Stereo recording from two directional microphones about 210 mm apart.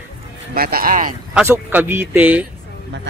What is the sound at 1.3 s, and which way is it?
Speech, 5° right (ahead or behind).